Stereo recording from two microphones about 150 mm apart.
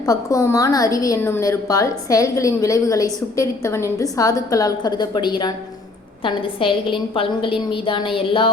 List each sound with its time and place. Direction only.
0.0 s a woman's voice: 25° left (ahead or behind)